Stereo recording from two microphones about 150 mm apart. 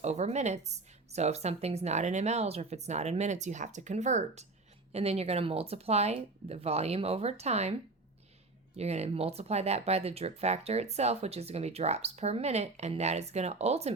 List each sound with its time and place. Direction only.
0.0 s speech: 50° right (ahead or behind)